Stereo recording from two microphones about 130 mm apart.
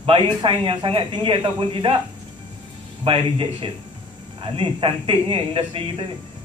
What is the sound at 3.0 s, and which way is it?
A man's voice, 45° right (ahead or behind).